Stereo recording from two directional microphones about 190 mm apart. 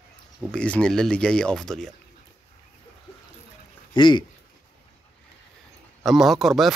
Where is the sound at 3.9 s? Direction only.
25° left (ahead or behind).